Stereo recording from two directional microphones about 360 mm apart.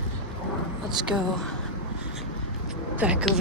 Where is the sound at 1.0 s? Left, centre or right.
Centre.